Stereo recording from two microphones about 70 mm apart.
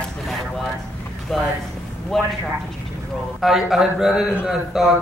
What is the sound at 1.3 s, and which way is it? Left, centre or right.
Speech, centre.